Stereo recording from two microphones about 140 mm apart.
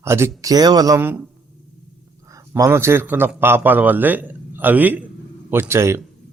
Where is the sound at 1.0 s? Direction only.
15° right (ahead or behind).